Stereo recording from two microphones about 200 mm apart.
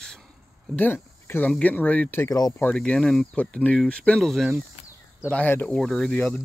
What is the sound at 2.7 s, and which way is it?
Speech, 5° left (ahead or behind).